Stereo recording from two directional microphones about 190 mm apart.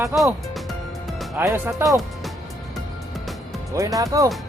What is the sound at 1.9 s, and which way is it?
Speech, centre (ahead or behind).